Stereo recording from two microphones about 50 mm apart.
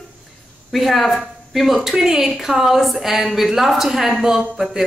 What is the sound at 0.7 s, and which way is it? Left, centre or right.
A woman's voice, centre.